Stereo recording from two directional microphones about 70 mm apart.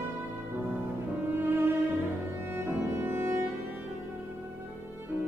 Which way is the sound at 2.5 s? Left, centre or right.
Right.